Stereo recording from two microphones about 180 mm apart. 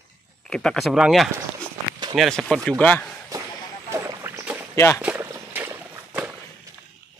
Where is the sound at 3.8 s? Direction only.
15° right (ahead or behind).